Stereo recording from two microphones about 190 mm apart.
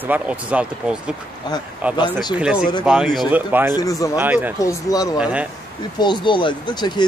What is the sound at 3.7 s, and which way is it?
Speech, 15° left (ahead or behind).